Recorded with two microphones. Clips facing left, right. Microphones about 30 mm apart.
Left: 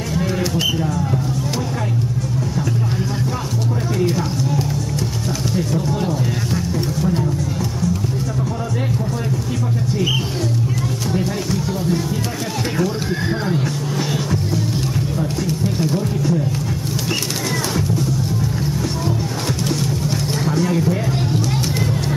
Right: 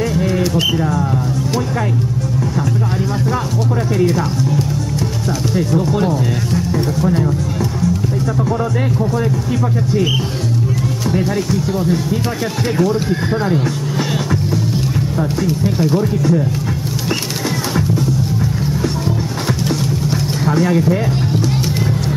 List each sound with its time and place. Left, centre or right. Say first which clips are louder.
0.1 s bird: right 4 dB; centre
0.7 s speech: right 4 dB; centre
5.5 s speech: right 5 dB; centre
11.5 s speech: right 2 dB; centre
15.4 s speech: right 4 dB; centre
20.4 s speech: right 5 dB; centre